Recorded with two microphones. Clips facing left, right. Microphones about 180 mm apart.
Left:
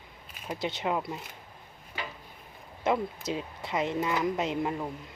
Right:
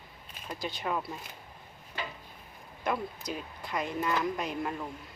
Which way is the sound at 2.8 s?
25° left (ahead or behind).